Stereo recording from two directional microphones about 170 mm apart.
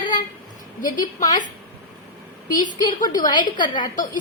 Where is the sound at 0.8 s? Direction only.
50° left (ahead or behind).